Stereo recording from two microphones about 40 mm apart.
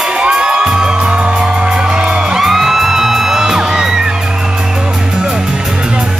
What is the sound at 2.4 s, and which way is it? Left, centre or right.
Music, centre.